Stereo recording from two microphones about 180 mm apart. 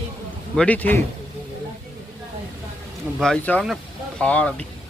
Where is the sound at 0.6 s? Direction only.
10° left (ahead or behind).